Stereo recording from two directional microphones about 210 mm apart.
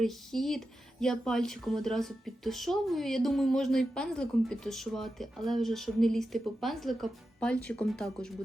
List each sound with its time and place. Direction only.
0.0 s speech: centre (ahead or behind)